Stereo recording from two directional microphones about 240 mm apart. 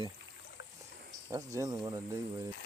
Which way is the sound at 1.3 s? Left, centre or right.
Centre.